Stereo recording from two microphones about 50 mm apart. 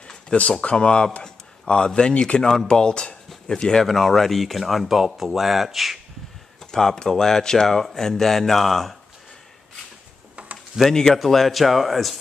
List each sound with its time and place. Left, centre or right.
0.1 s speech: left; by 5.9 s centre
6.7 s speech: centre
10.9 s speech: centre